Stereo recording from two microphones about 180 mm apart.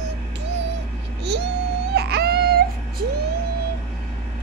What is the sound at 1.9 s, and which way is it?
Wail, 65° right (ahead or behind).